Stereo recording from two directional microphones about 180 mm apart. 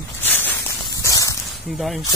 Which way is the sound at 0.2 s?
10° left (ahead or behind).